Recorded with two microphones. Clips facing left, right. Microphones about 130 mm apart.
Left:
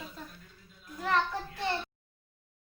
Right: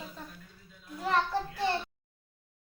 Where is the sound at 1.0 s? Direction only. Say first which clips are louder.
Even; 30° right (ahead or behind).